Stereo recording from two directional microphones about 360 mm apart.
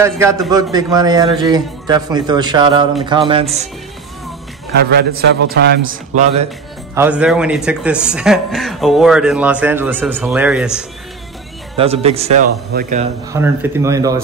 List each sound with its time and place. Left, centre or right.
0.0 s a man's voice: centre
4.7 s a man's voice: right
7.0 s speech: centre
11.7 s a man's voice: centre
13.3 s a man's voice: centre